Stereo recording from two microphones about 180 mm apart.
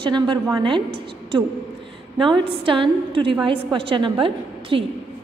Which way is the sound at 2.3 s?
30° right (ahead or behind).